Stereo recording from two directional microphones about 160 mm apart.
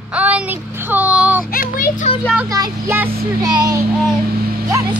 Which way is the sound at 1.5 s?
60° left (ahead or behind).